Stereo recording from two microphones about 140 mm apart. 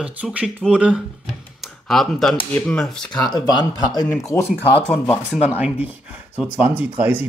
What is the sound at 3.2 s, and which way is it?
Speech, 30° left (ahead or behind).